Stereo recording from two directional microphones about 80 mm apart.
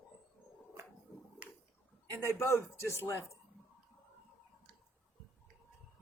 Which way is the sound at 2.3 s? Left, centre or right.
Left.